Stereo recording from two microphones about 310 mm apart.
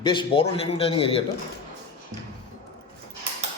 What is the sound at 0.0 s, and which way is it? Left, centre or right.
A man's voice, centre.